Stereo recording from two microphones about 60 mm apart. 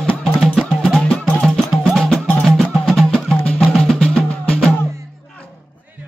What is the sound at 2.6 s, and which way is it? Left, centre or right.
Music, centre.